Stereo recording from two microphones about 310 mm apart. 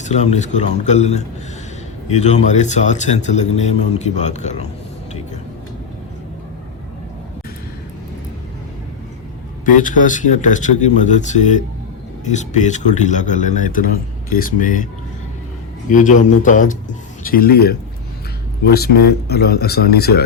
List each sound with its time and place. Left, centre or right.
0.0 s a man's voice: left
9.6 s a man's voice: left
15.9 s a man's voice: left